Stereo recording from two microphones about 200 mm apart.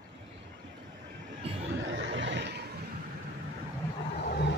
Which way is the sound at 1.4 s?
30° right (ahead or behind).